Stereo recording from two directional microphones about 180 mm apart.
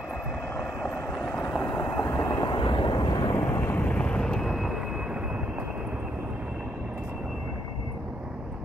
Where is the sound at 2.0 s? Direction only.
20° left (ahead or behind); by 7.5 s 5° right (ahead or behind).